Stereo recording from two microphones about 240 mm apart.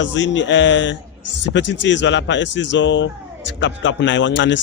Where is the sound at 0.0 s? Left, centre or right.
Left.